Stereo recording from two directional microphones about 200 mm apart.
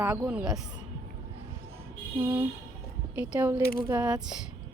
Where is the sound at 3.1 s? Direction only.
5° right (ahead or behind).